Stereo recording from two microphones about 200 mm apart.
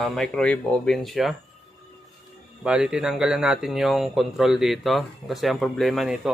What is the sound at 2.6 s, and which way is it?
Speech, 5° right (ahead or behind).